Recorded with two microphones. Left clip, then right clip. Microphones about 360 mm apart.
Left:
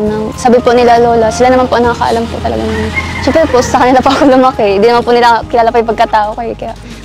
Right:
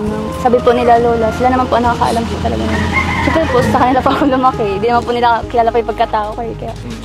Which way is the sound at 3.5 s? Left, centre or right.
Left.